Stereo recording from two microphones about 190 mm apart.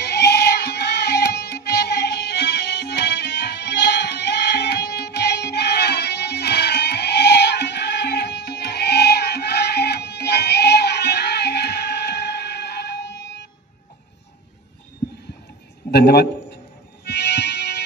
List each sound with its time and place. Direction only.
0.0 s music: 65° left (ahead or behind)
15.9 s a sound: 55° left (ahead or behind)
17.0 s music: 65° left (ahead or behind)